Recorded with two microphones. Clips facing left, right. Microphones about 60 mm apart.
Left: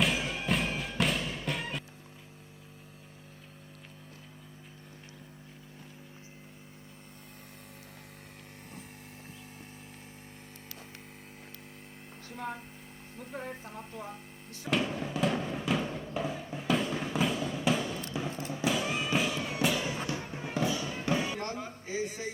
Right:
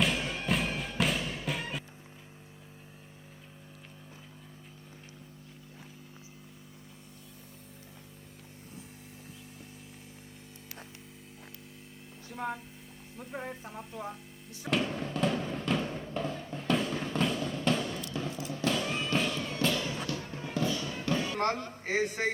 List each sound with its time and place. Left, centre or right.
0.0 s music: centre
13.3 s speech: right
14.7 s music: centre
18.3 s music: left
18.5 s music: centre
21.3 s music: right
21.8 s a man's voice: right